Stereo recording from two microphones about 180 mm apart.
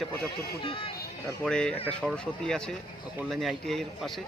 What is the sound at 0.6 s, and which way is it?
Speech, 30° left (ahead or behind).